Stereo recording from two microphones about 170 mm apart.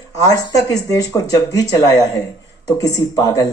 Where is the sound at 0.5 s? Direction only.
20° left (ahead or behind).